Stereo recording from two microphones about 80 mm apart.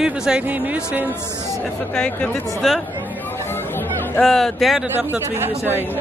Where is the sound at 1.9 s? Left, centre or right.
Centre.